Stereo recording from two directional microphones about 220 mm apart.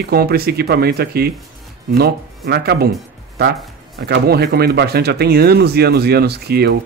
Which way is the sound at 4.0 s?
50° right (ahead or behind).